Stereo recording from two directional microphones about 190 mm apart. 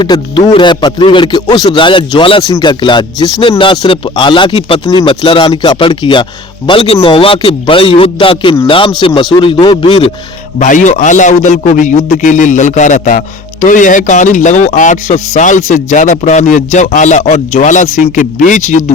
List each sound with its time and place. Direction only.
0.0 s speech: 25° left (ahead or behind)
10.6 s speech: 40° left (ahead or behind)